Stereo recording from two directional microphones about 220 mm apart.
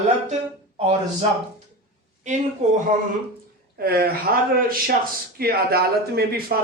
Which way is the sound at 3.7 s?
45° right (ahead or behind).